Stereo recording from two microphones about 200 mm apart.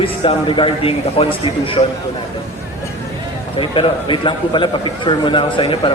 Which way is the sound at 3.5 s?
25° left (ahead or behind).